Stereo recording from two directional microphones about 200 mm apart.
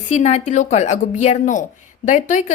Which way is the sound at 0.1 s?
35° left (ahead or behind).